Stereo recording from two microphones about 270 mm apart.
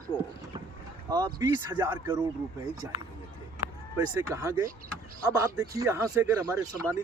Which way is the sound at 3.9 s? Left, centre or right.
Centre.